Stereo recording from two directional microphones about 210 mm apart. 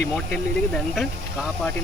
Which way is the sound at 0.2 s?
5° left (ahead or behind).